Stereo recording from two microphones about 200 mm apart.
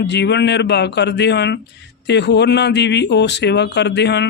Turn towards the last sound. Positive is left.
turn(degrees=60)  # may be behind; listen again after turning